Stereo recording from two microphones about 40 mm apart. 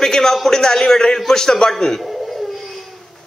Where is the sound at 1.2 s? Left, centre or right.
Centre.